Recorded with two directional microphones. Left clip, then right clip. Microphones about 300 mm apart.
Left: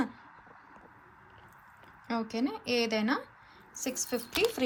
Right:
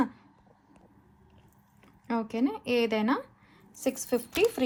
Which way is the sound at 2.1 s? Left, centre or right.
Centre.